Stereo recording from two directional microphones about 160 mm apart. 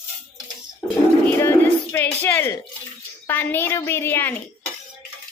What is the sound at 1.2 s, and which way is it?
Speech, 15° left (ahead or behind).